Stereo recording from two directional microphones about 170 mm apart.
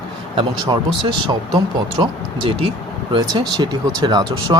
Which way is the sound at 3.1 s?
25° right (ahead or behind).